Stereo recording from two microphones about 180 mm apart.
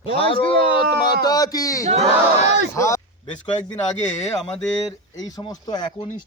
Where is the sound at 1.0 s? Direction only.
20° left (ahead or behind).